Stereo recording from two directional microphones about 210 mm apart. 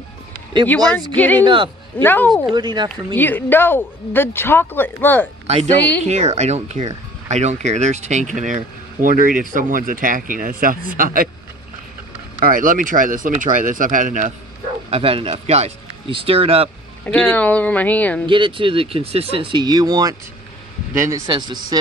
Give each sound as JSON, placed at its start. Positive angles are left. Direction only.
{"t": 1.1, "sound": "speech", "side_deg": 10}
{"t": 1.4, "sound": "a man's voice", "side_deg": -20}
{"t": 2.0, "sound": "speech", "side_deg": 10}
{"t": 2.5, "sound": "speech", "side_deg": -20}
{"t": 3.2, "sound": "speech", "side_deg": 10}
{"t": 6.0, "sound": "speech", "side_deg": -35}
{"t": 12.4, "sound": "speech", "side_deg": -40}
{"t": 17.0, "sound": "speech", "side_deg": 5}
{"t": 18.2, "sound": "speech", "side_deg": -20}